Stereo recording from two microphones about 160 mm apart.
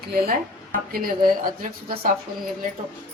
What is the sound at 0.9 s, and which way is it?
Speech, 65° right (ahead or behind).